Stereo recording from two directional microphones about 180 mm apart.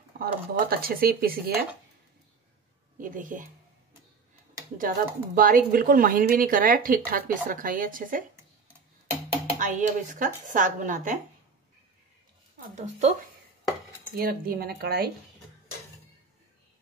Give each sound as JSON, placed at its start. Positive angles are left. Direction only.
{"t": 0.2, "sound": "speech", "side_deg": -55}
{"t": 3.0, "sound": "speech", "side_deg": -45}
{"t": 4.7, "sound": "speech", "side_deg": -50}
{"t": 9.6, "sound": "speech", "side_deg": -45}
{"t": 12.7, "sound": "speech", "side_deg": -40}
{"t": 14.1, "sound": "speech", "side_deg": -55}